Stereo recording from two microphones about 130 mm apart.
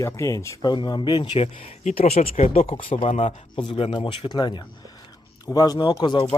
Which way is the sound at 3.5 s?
45° left (ahead or behind).